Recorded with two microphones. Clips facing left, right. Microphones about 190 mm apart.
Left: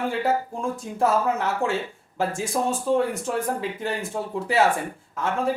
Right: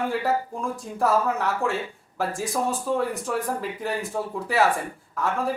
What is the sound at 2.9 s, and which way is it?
Speech, 25° left (ahead or behind).